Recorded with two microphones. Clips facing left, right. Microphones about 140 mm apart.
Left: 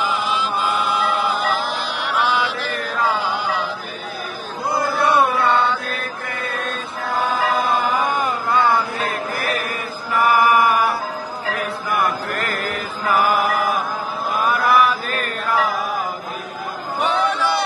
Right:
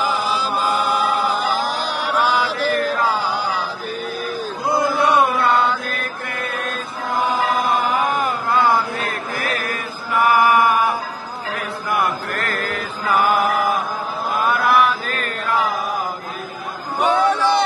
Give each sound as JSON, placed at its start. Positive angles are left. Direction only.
{"t": 0.0, "sound": "chant", "side_deg": -40}
{"t": 4.9, "sound": "chant", "side_deg": -10}
{"t": 7.2, "sound": "music", "side_deg": -10}
{"t": 11.5, "sound": "a sound", "side_deg": -5}
{"t": 12.3, "sound": "mantra", "side_deg": 10}
{"t": 14.5, "sound": "chant", "side_deg": 0}
{"t": 15.0, "sound": "chant", "side_deg": -35}
{"t": 17.0, "sound": "a sound", "side_deg": -15}